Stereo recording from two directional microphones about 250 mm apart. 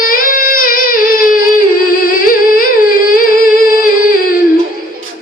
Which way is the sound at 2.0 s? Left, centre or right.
Left.